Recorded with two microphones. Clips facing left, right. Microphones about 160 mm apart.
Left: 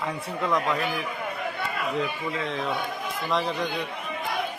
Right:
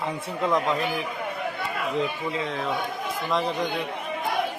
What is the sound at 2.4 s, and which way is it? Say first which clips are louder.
A man's voice: right 1 dB; centre (ahead or behind).